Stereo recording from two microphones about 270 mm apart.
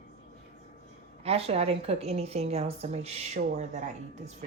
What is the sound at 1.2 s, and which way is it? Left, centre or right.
A woman's voice, right.